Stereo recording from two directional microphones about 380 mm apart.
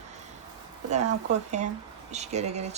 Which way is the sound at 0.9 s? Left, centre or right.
Centre.